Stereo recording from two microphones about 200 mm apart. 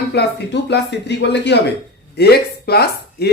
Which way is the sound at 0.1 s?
55° left (ahead or behind).